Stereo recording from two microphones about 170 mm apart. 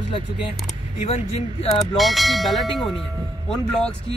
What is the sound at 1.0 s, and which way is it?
Speech, 35° left (ahead or behind).